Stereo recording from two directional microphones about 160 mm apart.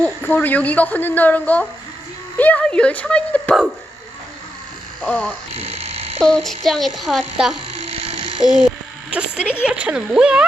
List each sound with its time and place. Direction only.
0.0 s a woman's voice: 10° left (ahead or behind)
5.0 s a woman's voice: 10° left (ahead or behind)
5.7 s a sound: 40° right (ahead or behind)
6.2 s speech: centre (ahead or behind)
7.9 s electric shaver: 40° right (ahead or behind)
8.5 s a sound: 5° right (ahead or behind)
9.6 s speech: 5° right (ahead or behind)